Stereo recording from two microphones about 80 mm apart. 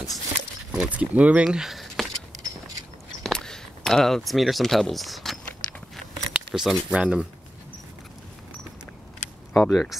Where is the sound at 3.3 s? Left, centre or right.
Centre.